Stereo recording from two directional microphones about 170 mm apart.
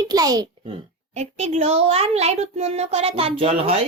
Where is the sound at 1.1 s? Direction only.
40° right (ahead or behind).